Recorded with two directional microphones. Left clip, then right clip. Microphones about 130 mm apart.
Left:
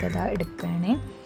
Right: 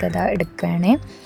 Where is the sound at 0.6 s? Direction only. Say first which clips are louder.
Right 9 dB; 45° right (ahead or behind).